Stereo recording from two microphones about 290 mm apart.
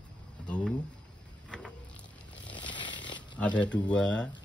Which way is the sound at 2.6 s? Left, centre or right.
Centre.